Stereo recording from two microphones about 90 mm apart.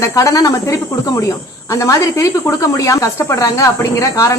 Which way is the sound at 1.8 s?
35° left (ahead or behind).